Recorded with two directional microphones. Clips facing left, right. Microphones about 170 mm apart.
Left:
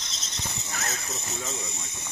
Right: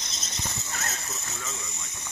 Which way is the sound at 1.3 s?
30° left (ahead or behind).